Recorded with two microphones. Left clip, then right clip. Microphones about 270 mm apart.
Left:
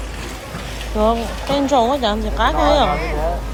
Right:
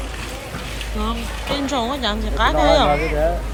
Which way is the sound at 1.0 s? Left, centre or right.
Centre.